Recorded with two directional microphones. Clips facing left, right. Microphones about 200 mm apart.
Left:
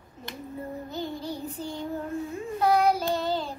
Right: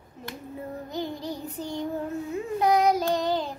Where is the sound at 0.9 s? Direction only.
15° right (ahead or behind).